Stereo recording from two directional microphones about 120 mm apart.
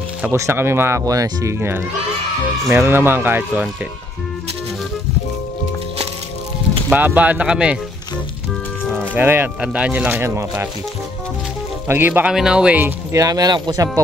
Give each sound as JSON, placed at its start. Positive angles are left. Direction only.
{"t": 0.2, "sound": "speech", "side_deg": -20}
{"t": 6.9, "sound": "speech", "side_deg": -15}
{"t": 8.9, "sound": "speech", "side_deg": -15}
{"t": 11.9, "sound": "speech", "side_deg": -15}
{"t": 13.1, "sound": "speech", "side_deg": -30}